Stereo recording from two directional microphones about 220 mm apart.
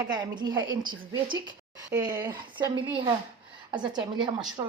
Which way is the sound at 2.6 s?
20° right (ahead or behind).